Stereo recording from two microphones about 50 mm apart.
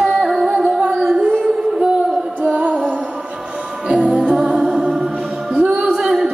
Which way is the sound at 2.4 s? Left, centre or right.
Right.